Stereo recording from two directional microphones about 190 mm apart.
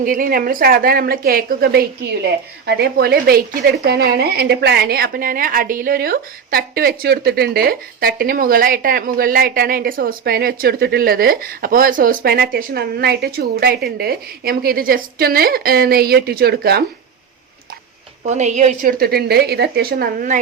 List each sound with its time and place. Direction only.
0.0 s speech: 45° right (ahead or behind)
18.3 s speech: 35° right (ahead or behind)